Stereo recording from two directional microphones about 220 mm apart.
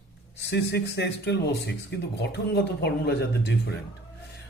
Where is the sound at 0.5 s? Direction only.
50° left (ahead or behind).